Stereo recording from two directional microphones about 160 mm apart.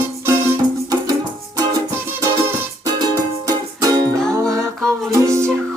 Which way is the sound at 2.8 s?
25° right (ahead or behind).